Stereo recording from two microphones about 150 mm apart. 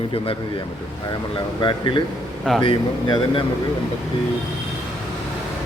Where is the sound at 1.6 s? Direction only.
35° left (ahead or behind).